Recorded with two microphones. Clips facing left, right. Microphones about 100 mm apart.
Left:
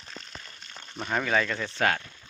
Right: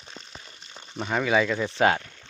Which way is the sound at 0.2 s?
10° right (ahead or behind).